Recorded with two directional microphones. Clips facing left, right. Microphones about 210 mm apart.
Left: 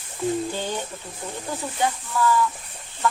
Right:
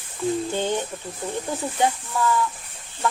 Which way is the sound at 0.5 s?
20° right (ahead or behind).